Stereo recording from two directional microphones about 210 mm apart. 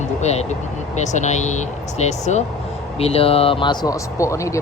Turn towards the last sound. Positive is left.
turn(degrees=15)  # may be behind; listen again after turning